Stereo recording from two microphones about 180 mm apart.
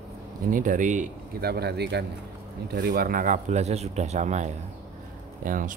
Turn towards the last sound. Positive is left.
turn(degrees=-50)  # may be behind; listen again after turning